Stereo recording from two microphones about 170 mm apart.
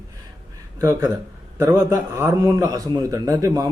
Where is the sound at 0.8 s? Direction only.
15° right (ahead or behind).